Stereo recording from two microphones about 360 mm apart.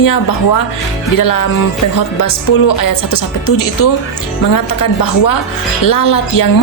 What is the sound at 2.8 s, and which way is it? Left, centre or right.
A woman's voice, left.